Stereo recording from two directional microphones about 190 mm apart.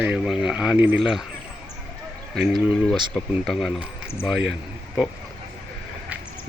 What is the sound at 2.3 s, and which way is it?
Speech, centre (ahead or behind).